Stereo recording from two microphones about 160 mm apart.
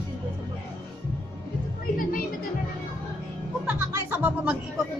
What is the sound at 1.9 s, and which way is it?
Music, 60° left (ahead or behind).